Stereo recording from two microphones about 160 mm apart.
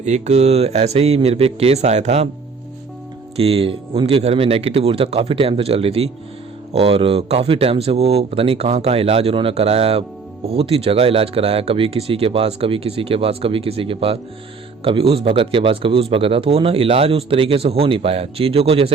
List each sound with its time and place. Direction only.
0.0 s speech: 45° right (ahead or behind)
3.3 s speech: 35° right (ahead or behind)